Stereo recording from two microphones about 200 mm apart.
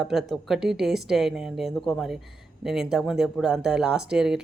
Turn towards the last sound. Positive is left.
turn(degrees=-5)  # may be behind; listen again after turning